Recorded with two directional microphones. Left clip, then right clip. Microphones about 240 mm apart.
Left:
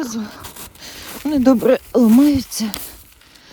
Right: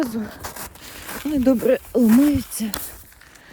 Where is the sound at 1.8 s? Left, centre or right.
Centre.